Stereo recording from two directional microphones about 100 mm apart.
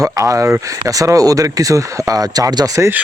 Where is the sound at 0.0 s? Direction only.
35° right (ahead or behind).